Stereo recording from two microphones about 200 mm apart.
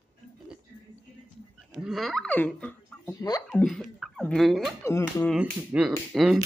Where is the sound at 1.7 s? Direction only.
Centre (ahead or behind).